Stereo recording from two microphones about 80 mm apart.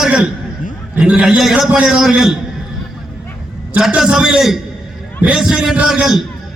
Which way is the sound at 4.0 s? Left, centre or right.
Centre.